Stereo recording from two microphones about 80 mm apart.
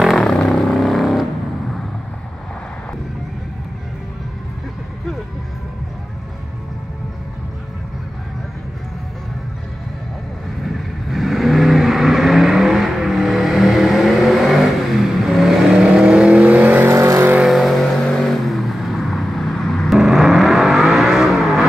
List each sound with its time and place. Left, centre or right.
0.0 s vehicle: centre
10.6 s vehicle: centre; by 16.9 s right
16.9 s vehicle: right
17.5 s vehicle: centre